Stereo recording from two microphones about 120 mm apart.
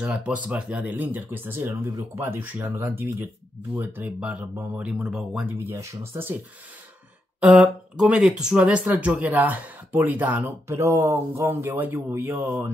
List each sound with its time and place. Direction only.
0.0 s speech: 10° right (ahead or behind)
5.5 s speech: 20° right (ahead or behind)
7.3 s speech: 10° right (ahead or behind)